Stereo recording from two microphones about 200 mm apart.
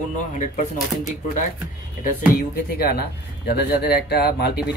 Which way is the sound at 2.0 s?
45° left (ahead or behind).